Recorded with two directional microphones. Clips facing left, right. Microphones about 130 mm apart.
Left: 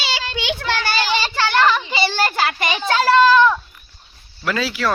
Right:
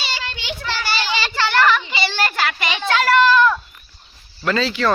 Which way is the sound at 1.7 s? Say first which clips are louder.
Left 1 dB; 40° left (ahead or behind).